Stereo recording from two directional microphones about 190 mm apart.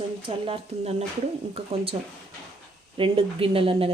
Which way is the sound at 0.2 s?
30° right (ahead or behind).